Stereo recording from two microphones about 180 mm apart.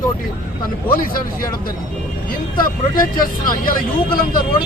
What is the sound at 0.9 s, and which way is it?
Speech, 55° left (ahead or behind).